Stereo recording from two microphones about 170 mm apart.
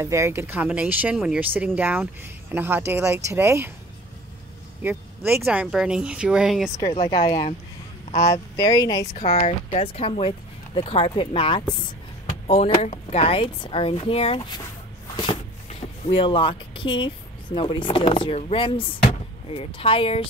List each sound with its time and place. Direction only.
0.0 s speech: 15° right (ahead or behind)
4.8 s speech: 10° right (ahead or behind)
6.9 s speech: 35° left (ahead or behind)
8.3 s speech: 20° left (ahead or behind)
9.1 s speech: 40° left (ahead or behind)
16.1 s speech: 30° left (ahead or behind)